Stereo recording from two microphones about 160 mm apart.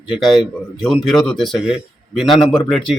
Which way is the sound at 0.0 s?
Centre (ahead or behind).